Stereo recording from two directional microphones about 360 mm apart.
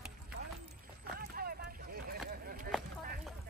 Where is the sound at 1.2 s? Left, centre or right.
Right.